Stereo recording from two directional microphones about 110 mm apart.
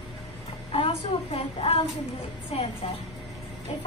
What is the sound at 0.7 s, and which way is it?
A woman's voice, 50° left (ahead or behind).